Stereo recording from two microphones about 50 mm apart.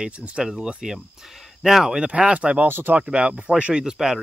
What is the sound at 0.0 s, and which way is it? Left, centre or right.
Speech, right.